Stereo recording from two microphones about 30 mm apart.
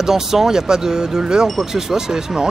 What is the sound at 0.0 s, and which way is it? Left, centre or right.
Speech, centre.